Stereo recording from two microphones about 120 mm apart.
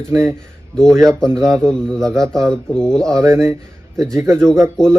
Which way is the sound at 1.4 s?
5° left (ahead or behind).